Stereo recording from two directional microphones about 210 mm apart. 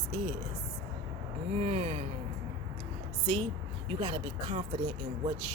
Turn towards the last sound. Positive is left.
turn(degrees=-25)  # may be behind; listen again after turning